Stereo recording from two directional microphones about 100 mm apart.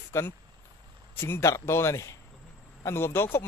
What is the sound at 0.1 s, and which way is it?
Speech, 25° left (ahead or behind).